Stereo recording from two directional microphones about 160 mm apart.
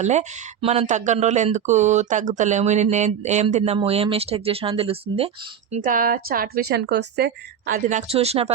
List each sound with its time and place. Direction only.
0.0 s speech: 45° right (ahead or behind)
5.7 s a woman's voice: 55° right (ahead or behind); by 7.8 s 90° right
7.9 s speech: 50° right (ahead or behind)
8.1 s speech: 40° right (ahead or behind)